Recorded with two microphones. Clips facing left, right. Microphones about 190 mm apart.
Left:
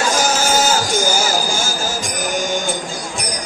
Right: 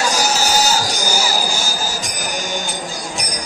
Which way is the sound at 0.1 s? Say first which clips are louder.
Left 2 dB; 50° left (ahead or behind).